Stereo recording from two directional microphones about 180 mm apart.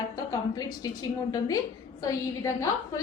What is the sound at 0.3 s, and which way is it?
A woman's voice, 20° left (ahead or behind).